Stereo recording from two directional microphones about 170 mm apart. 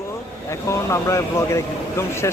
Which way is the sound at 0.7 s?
15° left (ahead or behind).